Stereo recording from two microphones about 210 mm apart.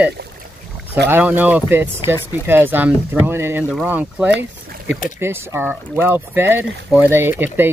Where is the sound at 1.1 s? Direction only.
10° right (ahead or behind).